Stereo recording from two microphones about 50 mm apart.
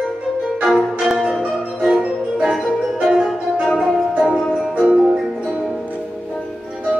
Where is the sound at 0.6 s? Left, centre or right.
Centre.